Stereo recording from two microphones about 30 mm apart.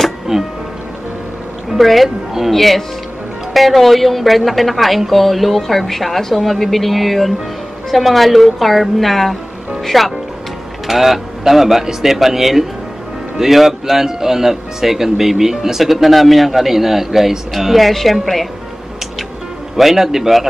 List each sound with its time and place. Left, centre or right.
0.3 s speech: centre
1.8 s a woman's voice: centre
10.9 s a woman's voice: centre
20.0 s speech: centre